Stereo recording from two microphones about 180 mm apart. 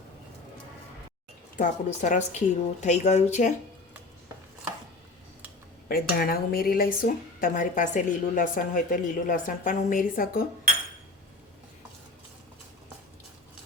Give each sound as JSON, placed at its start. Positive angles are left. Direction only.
{"t": 1.5, "sound": "speech", "side_deg": 45}
{"t": 5.9, "sound": "speech", "side_deg": 55}